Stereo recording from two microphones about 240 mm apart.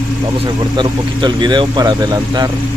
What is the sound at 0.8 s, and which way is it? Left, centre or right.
Speech, centre.